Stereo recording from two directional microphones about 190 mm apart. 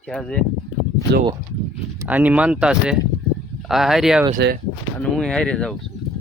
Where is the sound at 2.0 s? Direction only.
10° right (ahead or behind).